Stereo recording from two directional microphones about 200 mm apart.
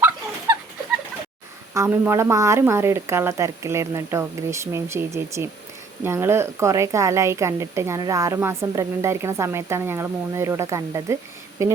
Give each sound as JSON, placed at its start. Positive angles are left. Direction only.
{"t": 1.7, "sound": "speech", "side_deg": -15}